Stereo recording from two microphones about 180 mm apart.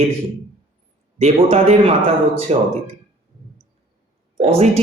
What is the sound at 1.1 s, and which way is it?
Speech, 35° right (ahead or behind).